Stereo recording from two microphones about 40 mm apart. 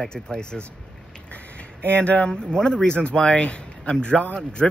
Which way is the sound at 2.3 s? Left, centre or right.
Left.